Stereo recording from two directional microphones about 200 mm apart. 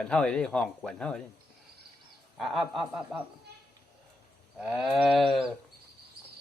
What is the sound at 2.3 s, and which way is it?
Speech, centre (ahead or behind).